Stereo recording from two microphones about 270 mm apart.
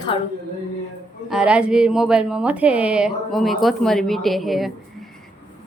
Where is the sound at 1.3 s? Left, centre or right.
Centre.